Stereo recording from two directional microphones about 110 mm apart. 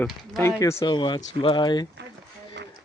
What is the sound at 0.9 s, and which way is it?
Speech, 45° left (ahead or behind).